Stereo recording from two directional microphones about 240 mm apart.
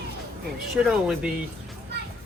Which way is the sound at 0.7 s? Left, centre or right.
Centre.